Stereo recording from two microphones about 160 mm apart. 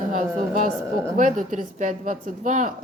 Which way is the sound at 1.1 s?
55° right (ahead or behind).